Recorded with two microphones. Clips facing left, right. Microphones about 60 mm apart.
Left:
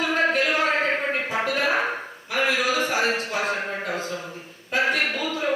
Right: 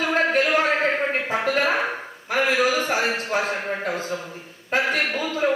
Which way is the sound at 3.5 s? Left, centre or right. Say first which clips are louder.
Right 1 dB; centre.